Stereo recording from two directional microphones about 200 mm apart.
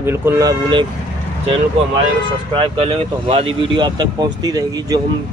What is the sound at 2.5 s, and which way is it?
Speech, 25° right (ahead or behind).